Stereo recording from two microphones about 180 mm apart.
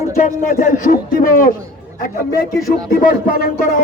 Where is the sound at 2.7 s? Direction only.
50° left (ahead or behind).